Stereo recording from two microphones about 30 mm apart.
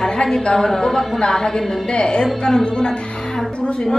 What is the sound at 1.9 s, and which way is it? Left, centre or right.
Speech, left.